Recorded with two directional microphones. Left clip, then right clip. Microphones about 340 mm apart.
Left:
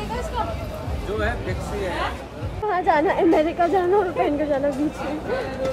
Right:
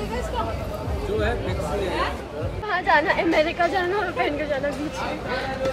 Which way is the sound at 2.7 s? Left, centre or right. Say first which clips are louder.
Even; centre.